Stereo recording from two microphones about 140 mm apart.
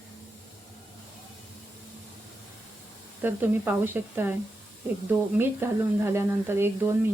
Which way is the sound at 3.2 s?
15° right (ahead or behind).